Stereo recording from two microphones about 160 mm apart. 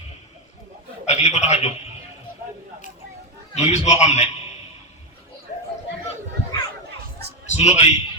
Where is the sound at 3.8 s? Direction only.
45° left (ahead or behind).